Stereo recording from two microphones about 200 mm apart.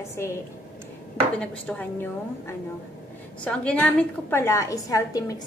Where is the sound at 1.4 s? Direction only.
5° left (ahead or behind).